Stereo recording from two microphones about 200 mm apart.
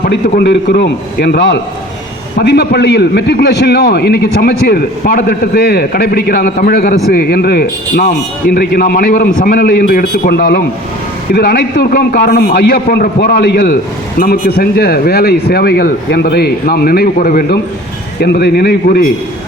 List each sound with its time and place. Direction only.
0.0 s a man's voice: 55° left (ahead or behind)